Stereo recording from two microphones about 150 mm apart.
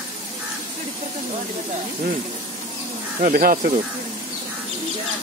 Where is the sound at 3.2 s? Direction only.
65° right (ahead or behind).